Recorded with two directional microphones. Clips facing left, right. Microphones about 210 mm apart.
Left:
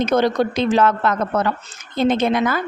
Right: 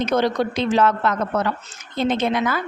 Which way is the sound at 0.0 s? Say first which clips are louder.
Left 3 dB; 45° left (ahead or behind).